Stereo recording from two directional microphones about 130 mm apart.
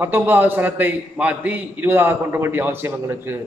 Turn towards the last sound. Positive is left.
turn(degrees=-15)  # may be behind; listen again after turning